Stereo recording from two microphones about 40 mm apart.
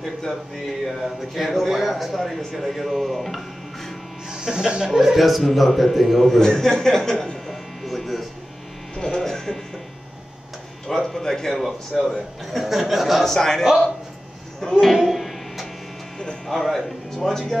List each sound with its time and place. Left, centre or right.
1.0 s speech: centre
4.3 s speech: centre
7.8 s a sound: centre
8.9 s electric shaver: centre
10.9 s speech: centre
13.2 s speech: centre
14.6 s a sound: centre
16.4 s speech: centre